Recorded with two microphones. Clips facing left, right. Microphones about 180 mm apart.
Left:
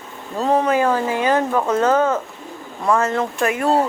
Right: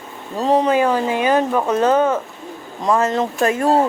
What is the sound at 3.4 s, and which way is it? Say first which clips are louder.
Speech: right 3 dB; 25° right (ahead or behind).